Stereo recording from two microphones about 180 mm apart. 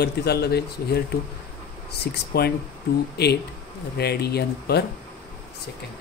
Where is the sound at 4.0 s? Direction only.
65° left (ahead or behind).